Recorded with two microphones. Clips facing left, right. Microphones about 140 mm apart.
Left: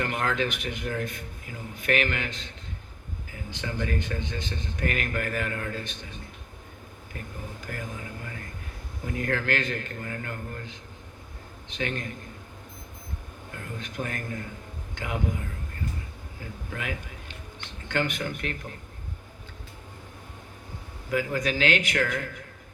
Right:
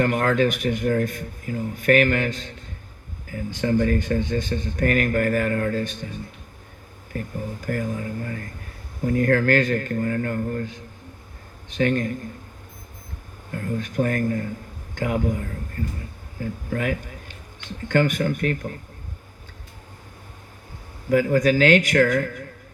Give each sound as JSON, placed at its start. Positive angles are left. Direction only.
{"t": 0.0, "sound": "speech", "side_deg": -45}
{"t": 7.1, "sound": "speech", "side_deg": -40}
{"t": 13.5, "sound": "a man's voice", "side_deg": -45}
{"t": 21.1, "sound": "speech", "side_deg": -45}